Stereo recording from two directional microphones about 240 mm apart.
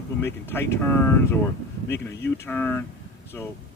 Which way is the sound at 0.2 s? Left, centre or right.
Centre.